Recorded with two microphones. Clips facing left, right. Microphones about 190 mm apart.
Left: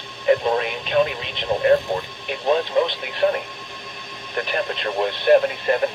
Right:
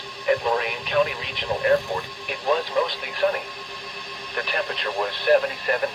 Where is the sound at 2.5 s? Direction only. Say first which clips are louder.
Left 4 dB; 25° left (ahead or behind).